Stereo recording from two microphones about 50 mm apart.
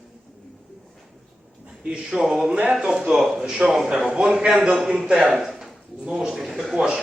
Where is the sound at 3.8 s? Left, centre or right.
Right; by 6.6 s centre.